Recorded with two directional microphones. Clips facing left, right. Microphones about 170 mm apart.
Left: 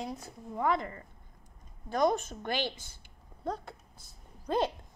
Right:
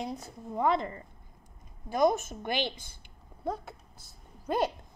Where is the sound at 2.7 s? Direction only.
55° right (ahead or behind).